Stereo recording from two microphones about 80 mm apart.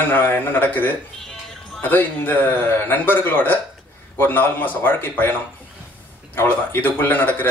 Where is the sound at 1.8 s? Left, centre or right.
Left.